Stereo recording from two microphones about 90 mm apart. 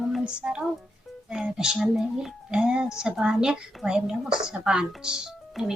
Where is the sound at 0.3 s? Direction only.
10° right (ahead or behind).